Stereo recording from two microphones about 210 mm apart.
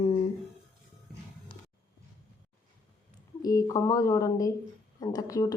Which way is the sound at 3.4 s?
15° left (ahead or behind).